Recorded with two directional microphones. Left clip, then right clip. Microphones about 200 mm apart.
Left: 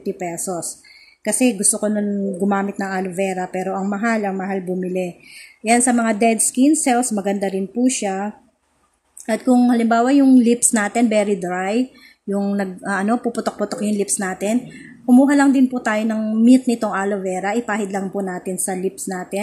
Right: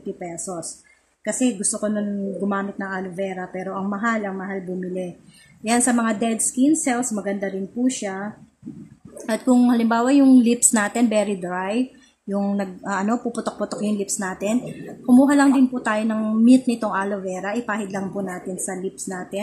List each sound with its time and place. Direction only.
0.2 s a woman's voice: 20° left (ahead or behind)
5.6 s a woman's voice: 10° left (ahead or behind)
9.3 s a woman's voice: 5° left (ahead or behind)